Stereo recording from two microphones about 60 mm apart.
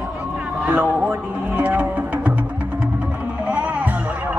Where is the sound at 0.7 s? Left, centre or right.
Right.